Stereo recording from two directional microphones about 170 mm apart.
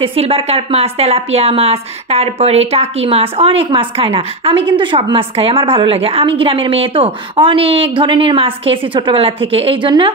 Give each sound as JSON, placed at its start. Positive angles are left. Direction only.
{"t": 0.0, "sound": "a woman's voice", "side_deg": -35}